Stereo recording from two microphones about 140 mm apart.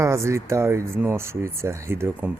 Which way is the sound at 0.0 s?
20° right (ahead or behind).